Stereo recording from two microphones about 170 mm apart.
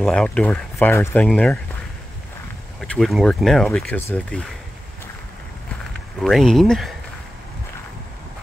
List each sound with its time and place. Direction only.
0.0 s speech: 5° left (ahead or behind)
2.8 s speech: centre (ahead or behind)
6.2 s speech: centre (ahead or behind)